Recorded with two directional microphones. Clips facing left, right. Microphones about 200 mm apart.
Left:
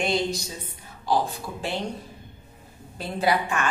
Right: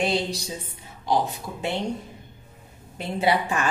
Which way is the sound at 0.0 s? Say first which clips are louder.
Even; 35° right (ahead or behind).